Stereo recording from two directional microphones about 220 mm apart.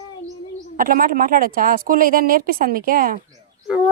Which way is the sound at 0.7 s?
40° right (ahead or behind).